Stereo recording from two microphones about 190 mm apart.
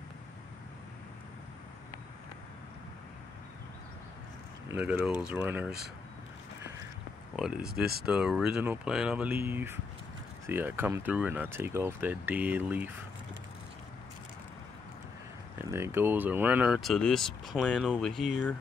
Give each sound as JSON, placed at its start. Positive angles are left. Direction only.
{"t": 4.6, "sound": "speech", "side_deg": -10}
{"t": 7.3, "sound": "speech", "side_deg": -5}
{"t": 7.8, "sound": "speech", "side_deg": -55}
{"t": 8.1, "sound": "speech", "side_deg": -5}
{"t": 15.7, "sound": "speech", "side_deg": -10}